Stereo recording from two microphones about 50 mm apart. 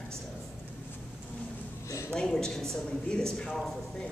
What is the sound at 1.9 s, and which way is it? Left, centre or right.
Speech, left.